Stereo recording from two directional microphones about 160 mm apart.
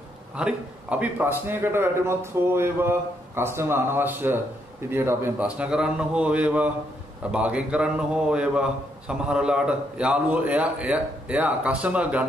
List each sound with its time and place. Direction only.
0.4 s a man's voice: 5° right (ahead or behind)